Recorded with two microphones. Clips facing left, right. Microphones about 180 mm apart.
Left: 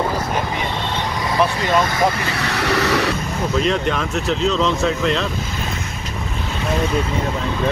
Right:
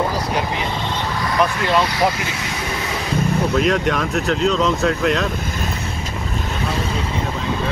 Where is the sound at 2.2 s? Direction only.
65° left (ahead or behind).